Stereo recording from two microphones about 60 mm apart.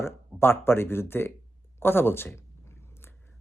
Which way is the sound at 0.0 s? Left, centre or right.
Left.